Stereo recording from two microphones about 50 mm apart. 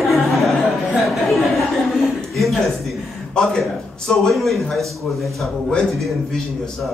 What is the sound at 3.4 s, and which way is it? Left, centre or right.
A man's voice, centre.